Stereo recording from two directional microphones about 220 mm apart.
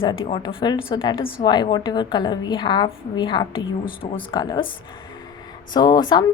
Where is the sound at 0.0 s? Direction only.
25° left (ahead or behind).